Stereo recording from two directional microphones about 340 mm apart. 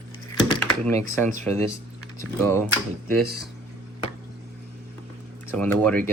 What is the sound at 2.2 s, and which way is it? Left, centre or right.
Speech, centre.